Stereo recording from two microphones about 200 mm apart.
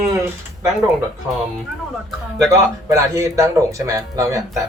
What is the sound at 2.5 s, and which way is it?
Speech, 15° right (ahead or behind).